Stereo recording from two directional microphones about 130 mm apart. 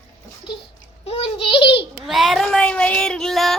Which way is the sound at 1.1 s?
45° left (ahead or behind).